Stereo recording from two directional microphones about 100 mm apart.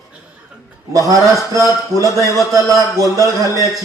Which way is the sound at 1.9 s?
35° right (ahead or behind).